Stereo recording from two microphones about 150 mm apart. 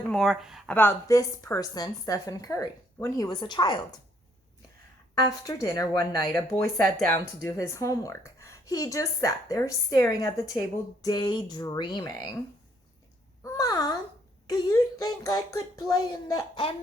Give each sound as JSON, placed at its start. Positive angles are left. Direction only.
{"t": 0.1, "sound": "speech", "side_deg": 0}
{"t": 0.7, "sound": "speech", "side_deg": 15}
{"t": 5.2, "sound": "speech", "side_deg": 25}
{"t": 13.4, "sound": "a sound", "side_deg": 25}
{"t": 14.4, "sound": "speech", "side_deg": 25}